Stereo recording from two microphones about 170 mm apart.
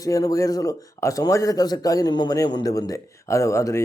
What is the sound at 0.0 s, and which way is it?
Speech, 20° left (ahead or behind).